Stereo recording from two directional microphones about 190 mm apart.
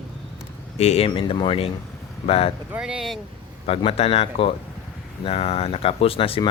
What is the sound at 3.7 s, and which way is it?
Speech, 30° left (ahead or behind).